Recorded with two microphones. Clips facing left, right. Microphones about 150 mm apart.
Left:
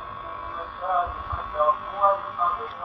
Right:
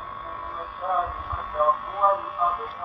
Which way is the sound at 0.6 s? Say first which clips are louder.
Left 1 dB; 5° right (ahead or behind).